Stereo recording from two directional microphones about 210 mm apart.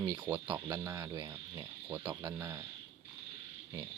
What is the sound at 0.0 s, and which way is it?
Speech, 10° right (ahead or behind).